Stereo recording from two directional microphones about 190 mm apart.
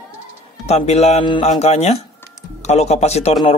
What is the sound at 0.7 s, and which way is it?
A man's voice, 35° left (ahead or behind).